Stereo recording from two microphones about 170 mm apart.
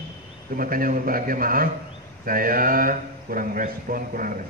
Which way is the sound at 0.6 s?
55° right (ahead or behind).